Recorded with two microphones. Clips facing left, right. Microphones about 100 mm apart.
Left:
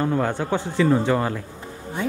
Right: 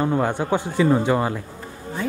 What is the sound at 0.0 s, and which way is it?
Speech, 15° right (ahead or behind).